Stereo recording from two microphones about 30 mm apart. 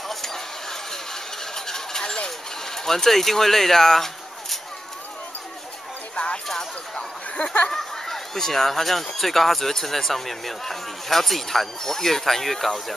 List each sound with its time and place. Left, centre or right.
0.1 s a sound: centre
6.1 s music: left
7.7 s speech: centre